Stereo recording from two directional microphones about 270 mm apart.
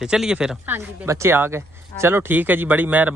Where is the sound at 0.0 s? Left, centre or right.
Centre.